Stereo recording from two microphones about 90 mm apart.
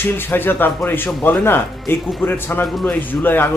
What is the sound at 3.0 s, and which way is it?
Speech, 20° left (ahead or behind).